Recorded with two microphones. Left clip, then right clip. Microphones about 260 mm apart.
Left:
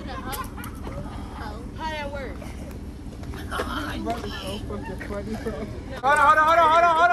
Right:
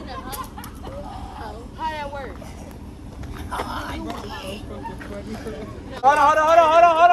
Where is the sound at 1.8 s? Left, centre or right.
Right.